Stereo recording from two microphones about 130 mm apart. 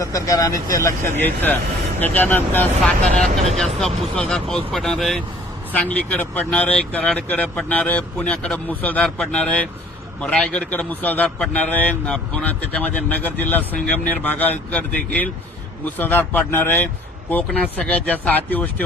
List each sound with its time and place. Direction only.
0.0 s speech: 25° left (ahead or behind)